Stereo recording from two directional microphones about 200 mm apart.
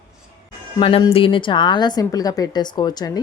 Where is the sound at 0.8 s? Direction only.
25° left (ahead or behind).